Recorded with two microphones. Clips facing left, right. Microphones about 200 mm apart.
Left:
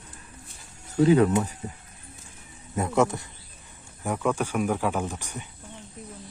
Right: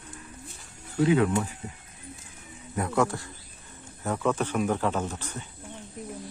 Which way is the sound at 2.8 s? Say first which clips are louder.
Left 2 dB; 20° left (ahead or behind).